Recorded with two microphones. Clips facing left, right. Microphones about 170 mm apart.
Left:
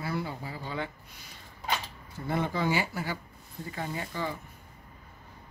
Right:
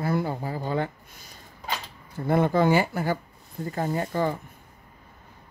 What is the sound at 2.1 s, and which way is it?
Speech, 55° right (ahead or behind).